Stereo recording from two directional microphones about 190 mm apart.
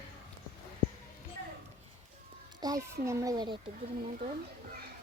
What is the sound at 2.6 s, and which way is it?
A child's voice, 20° right (ahead or behind).